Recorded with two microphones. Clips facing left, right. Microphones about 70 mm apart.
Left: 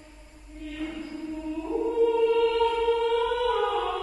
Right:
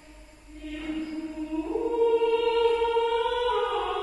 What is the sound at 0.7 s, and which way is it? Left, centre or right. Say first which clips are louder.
Music: right 3 dB; centre.